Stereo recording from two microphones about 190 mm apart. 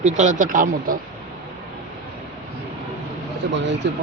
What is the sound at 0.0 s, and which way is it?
Speech, 40° right (ahead or behind).